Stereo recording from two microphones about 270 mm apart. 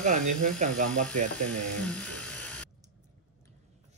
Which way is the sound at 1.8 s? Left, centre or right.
Centre.